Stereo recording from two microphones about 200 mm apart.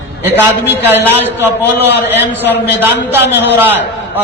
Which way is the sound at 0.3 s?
10° right (ahead or behind).